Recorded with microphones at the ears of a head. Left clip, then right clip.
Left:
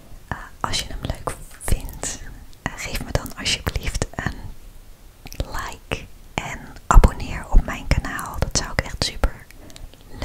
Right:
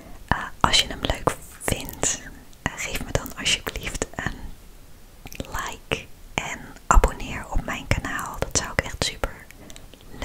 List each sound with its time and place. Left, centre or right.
0.3 s whispering: right
2.6 s whispering: centre